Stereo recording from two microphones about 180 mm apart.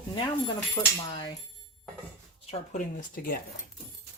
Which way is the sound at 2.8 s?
50° left (ahead or behind).